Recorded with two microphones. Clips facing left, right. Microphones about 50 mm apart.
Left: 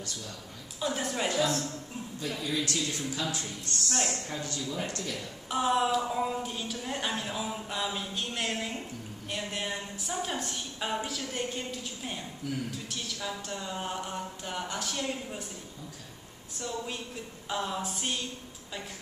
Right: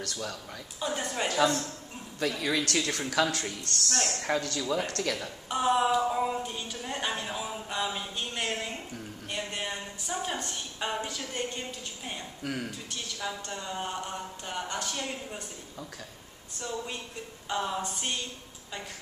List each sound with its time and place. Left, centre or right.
0.7 s a woman's voice: centre
2.1 s speech: right
2.7 s speech: right
3.9 s a woman's voice: centre
4.2 s speech: right
5.5 s a woman's voice: centre
12.4 s speech: right
13.3 s a woman's voice: centre
16.5 s a woman's voice: centre